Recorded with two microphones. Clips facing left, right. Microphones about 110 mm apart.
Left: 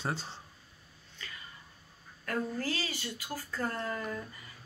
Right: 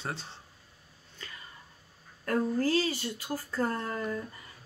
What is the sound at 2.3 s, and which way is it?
A woman's voice, 40° right (ahead or behind).